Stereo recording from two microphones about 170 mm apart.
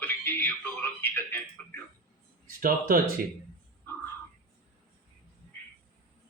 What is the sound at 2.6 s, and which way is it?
Speech, 55° right (ahead or behind).